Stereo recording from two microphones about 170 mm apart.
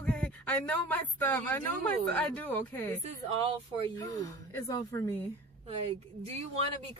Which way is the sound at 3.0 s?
35° right (ahead or behind).